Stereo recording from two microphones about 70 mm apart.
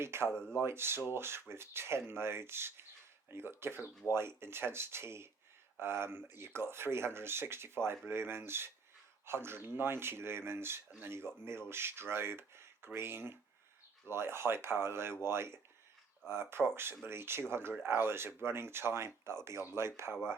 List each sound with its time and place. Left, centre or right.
0.0 s speech: right
0.3 s speech: centre
0.6 s speech: right